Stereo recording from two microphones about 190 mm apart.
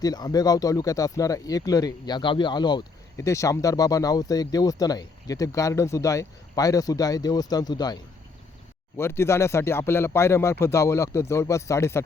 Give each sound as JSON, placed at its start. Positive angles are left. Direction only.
{"t": 0.0, "sound": "speech", "side_deg": 20}
{"t": 9.0, "sound": "speech", "side_deg": 15}